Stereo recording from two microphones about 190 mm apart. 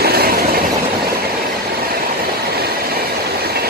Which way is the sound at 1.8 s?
55° right (ahead or behind).